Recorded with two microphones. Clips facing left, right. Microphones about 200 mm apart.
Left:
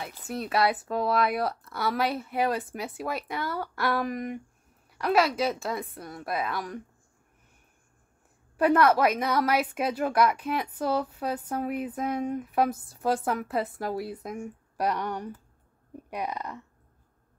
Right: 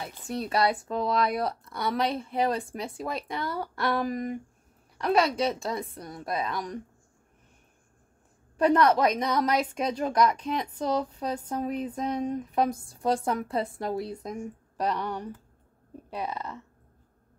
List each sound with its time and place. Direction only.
0.0 s speech: centre (ahead or behind)
3.3 s a sound: 25° right (ahead or behind)
4.9 s speech: centre (ahead or behind)
8.5 s a woman's voice: 5° left (ahead or behind)